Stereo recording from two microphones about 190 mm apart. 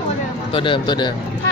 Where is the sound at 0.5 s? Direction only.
25° left (ahead or behind).